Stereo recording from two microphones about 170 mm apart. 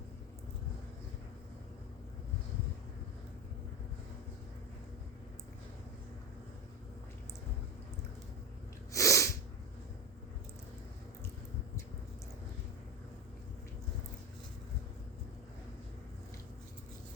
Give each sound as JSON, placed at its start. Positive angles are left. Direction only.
{"t": 8.9, "sound": "sneeze", "side_deg": 20}